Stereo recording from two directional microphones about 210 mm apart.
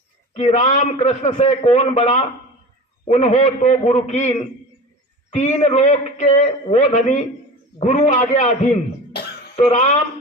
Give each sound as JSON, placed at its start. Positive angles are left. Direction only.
{"t": 0.3, "sound": "a man's voice", "side_deg": 30}